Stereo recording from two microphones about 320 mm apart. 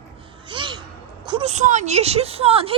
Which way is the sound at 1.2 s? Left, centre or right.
Centre.